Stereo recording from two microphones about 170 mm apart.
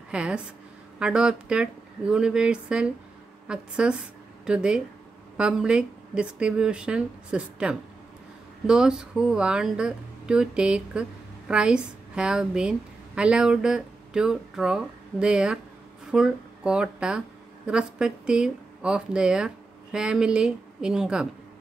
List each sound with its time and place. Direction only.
0.1 s a woman's voice: 5° right (ahead or behind)